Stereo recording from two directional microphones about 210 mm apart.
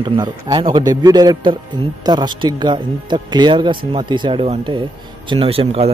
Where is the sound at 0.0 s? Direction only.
20° right (ahead or behind).